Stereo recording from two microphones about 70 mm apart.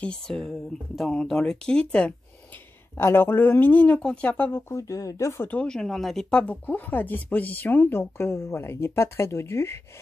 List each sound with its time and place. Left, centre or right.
0.3 s speech: centre
3.0 s speech: left; by 4.5 s centre
4.5 s speech: left
4.7 s speech: left
5.6 s speech: centre
6.4 s speech: left